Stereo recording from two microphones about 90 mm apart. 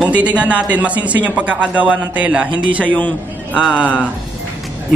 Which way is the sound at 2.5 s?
60° right (ahead or behind).